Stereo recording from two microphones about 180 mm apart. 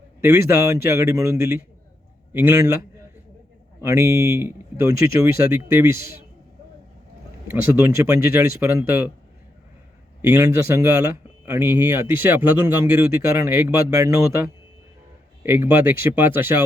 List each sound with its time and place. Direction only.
0.2 s a man's voice: 15° right (ahead or behind)
3.8 s a man's voice: 15° right (ahead or behind)
8.0 s a man's voice: 15° right (ahead or behind)
10.2 s a man's voice: 15° right (ahead or behind)